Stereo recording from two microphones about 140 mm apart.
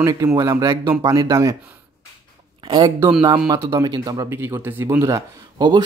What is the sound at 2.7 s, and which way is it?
A man's voice, 35° right (ahead or behind).